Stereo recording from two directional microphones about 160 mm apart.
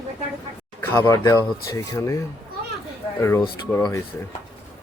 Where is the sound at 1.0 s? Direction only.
20° left (ahead or behind).